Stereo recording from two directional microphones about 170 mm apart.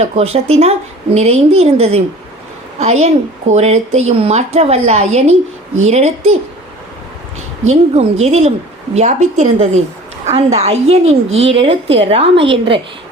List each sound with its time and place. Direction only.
0.0 s a woman's voice: 35° right (ahead or behind)
7.7 s a woman's voice: 40° right (ahead or behind)